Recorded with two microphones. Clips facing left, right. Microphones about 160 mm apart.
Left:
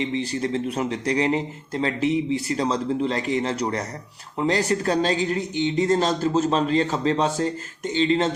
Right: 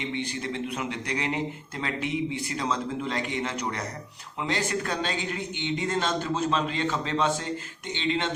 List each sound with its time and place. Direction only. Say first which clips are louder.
0.1 s a man's voice: left 7 dB; 35° left (ahead or behind)